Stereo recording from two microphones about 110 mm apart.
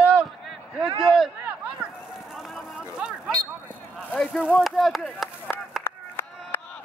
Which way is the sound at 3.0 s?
5° right (ahead or behind).